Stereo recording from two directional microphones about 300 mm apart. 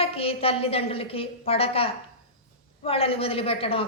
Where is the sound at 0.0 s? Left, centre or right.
Centre.